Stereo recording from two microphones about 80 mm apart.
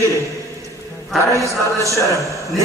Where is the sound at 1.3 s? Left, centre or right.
Right.